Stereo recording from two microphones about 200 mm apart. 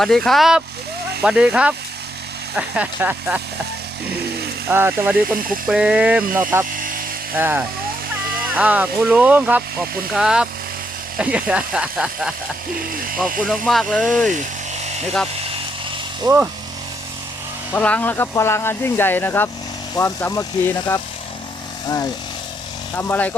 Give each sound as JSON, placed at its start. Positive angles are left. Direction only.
{"t": 0.0, "sound": "speech", "side_deg": 0}
{"t": 4.7, "sound": "speech", "side_deg": -10}
{"t": 13.4, "sound": "speech", "side_deg": 0}
{"t": 16.2, "sound": "speech", "side_deg": -10}
{"t": 17.7, "sound": "speech", "side_deg": 5}